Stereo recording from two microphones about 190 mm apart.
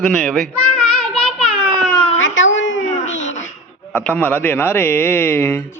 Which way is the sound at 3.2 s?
40° left (ahead or behind).